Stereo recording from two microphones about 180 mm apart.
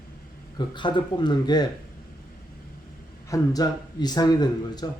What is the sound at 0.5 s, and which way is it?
Speech, 25° left (ahead or behind).